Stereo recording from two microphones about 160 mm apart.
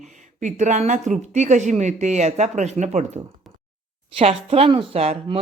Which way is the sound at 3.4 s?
Centre (ahead or behind).